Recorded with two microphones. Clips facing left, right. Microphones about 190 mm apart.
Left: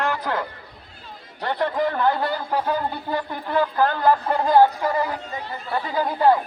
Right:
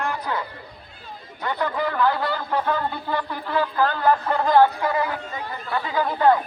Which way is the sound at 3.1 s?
45° left (ahead or behind).